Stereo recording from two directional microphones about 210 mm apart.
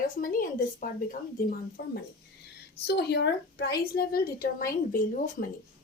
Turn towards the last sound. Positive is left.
turn(degrees=40)  # may be behind; listen again after turning